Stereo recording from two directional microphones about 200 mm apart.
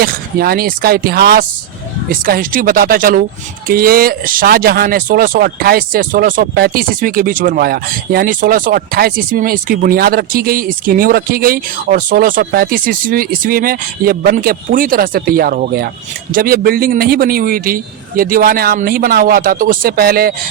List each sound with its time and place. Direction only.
0.0 s speech: 50° right (ahead or behind)